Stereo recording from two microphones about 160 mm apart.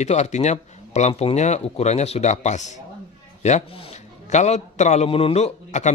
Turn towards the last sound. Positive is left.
turn(degrees=45)  # may be behind; listen again after turning